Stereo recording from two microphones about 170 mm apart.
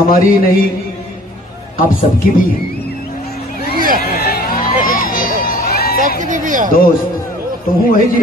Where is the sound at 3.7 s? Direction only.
55° right (ahead or behind).